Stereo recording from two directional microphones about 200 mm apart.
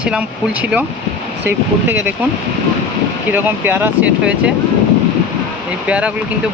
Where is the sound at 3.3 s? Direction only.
10° right (ahead or behind).